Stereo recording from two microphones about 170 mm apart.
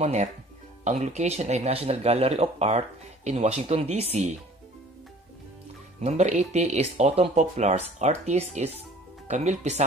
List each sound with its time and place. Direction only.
0.0 s speech: 40° right (ahead or behind)
5.9 s speech: 40° right (ahead or behind)